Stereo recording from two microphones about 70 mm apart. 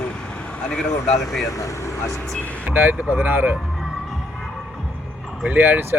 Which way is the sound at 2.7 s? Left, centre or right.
Right.